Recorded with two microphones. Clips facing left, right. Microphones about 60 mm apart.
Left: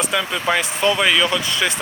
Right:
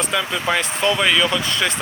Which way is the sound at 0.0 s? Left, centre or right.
Centre.